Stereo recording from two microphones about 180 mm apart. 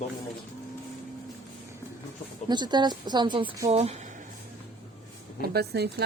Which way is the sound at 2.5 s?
25° right (ahead or behind).